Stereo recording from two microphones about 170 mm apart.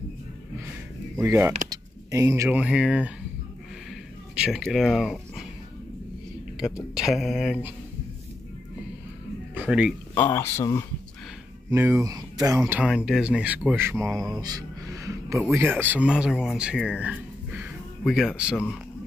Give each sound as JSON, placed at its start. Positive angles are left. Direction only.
{"t": 1.1, "sound": "speech", "side_deg": -15}
{"t": 1.7, "sound": "a sound", "side_deg": -20}
{"t": 2.6, "sound": "speech", "side_deg": -5}
{"t": 4.4, "sound": "speech", "side_deg": 0}
{"t": 7.0, "sound": "speech", "side_deg": 0}
{"t": 9.7, "sound": "speech", "side_deg": -5}
{"t": 10.1, "sound": "speech", "side_deg": 15}
{"t": 11.7, "sound": "speech", "side_deg": -15}
{"t": 12.8, "sound": "speech", "side_deg": 0}
{"t": 14.1, "sound": "speech", "side_deg": 0}
{"t": 14.4, "sound": "music", "side_deg": -20}
{"t": 15.5, "sound": "speech", "side_deg": -10}